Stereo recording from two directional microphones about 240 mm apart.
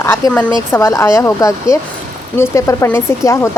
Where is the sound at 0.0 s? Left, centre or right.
Centre.